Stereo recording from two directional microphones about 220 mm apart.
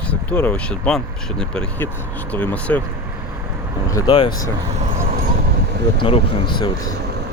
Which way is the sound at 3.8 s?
15° left (ahead or behind).